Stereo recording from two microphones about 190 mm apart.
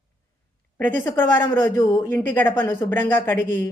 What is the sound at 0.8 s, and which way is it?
Speech, 10° left (ahead or behind).